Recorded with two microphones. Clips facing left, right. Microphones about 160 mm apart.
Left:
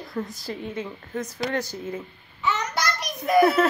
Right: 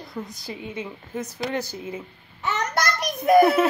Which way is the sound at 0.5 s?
10° right (ahead or behind).